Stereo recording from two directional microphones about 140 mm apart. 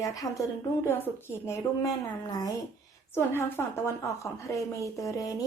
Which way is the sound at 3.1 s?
15° left (ahead or behind).